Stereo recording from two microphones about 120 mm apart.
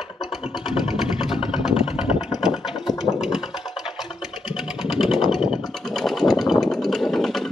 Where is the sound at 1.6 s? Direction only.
5° right (ahead or behind).